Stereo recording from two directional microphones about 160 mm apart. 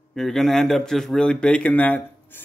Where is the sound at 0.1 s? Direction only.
Centre (ahead or behind).